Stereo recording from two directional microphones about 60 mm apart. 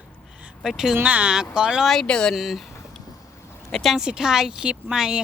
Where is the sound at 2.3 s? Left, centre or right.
Centre.